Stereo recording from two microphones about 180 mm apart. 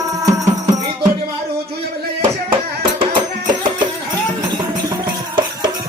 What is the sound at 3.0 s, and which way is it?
Music, 25° right (ahead or behind).